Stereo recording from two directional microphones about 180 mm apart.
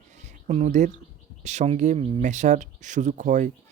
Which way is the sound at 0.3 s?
40° right (ahead or behind).